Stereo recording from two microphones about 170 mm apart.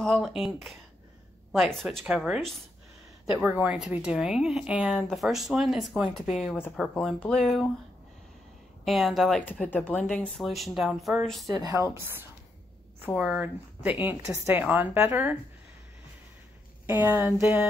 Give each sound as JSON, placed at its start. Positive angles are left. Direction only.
{"t": 0.0, "sound": "speech", "side_deg": 5}
{"t": 8.8, "sound": "speech", "side_deg": 0}
{"t": 9.4, "sound": "speech", "side_deg": 10}
{"t": 11.4, "sound": "a woman's voice", "side_deg": -20}
{"t": 16.8, "sound": "a woman's voice", "side_deg": -10}